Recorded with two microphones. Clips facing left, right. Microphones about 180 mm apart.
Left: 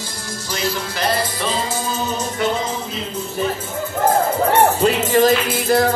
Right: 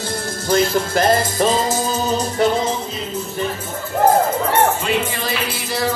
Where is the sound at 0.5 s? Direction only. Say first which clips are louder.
Right 8 dB; 50° right (ahead or behind).